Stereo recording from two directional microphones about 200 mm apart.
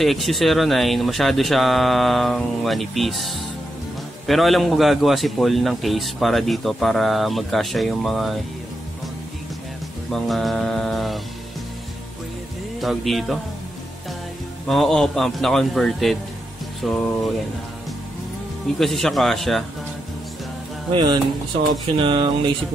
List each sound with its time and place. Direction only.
0.0 s speech: centre (ahead or behind)
10.1 s speech: centre (ahead or behind)
12.8 s speech: centre (ahead or behind)
14.7 s speech: centre (ahead or behind)
18.8 s speech: centre (ahead or behind)
20.9 s speech: 20° right (ahead or behind)